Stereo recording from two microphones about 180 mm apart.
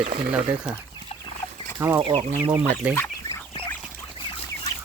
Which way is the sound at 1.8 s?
15° right (ahead or behind).